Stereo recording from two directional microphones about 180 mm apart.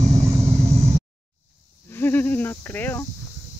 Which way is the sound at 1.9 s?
10° left (ahead or behind).